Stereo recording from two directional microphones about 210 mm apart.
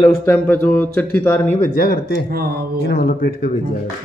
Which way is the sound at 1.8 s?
45° left (ahead or behind).